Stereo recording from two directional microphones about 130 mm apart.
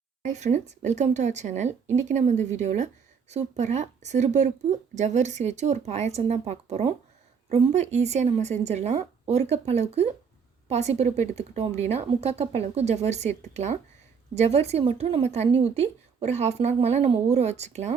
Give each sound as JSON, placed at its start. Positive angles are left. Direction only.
{"t": 0.3, "sound": "a woman's voice", "side_deg": -65}